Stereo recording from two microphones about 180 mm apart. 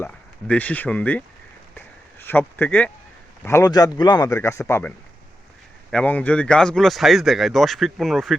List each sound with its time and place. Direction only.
0.0 s speech: 10° left (ahead or behind)
1.7 s a sound: 10° left (ahead or behind)
3.4 s speech: 20° left (ahead or behind); by 8.4 s centre (ahead or behind)